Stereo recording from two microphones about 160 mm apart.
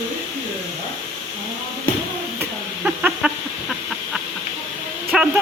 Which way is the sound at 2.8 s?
5° right (ahead or behind).